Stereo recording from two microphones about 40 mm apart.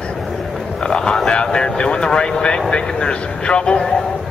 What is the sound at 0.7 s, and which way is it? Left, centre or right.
Vehicle, centre.